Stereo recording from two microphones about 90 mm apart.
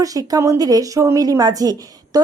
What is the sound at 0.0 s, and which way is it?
Speech, 40° right (ahead or behind).